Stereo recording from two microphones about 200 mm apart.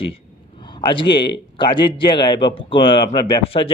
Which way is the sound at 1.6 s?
25° left (ahead or behind).